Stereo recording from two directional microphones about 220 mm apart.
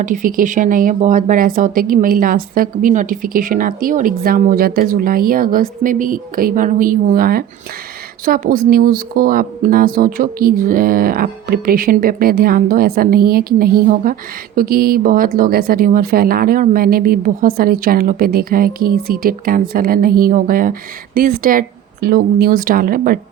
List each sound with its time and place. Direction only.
0.0 s speech: 35° right (ahead or behind)